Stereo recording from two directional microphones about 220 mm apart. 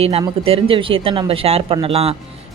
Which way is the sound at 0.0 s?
25° right (ahead or behind).